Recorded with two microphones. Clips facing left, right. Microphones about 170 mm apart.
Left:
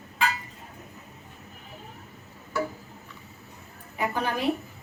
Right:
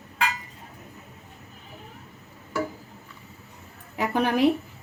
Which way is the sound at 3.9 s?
75° right (ahead or behind).